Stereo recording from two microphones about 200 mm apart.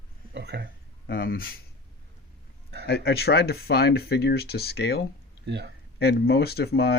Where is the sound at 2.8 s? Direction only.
55° left (ahead or behind).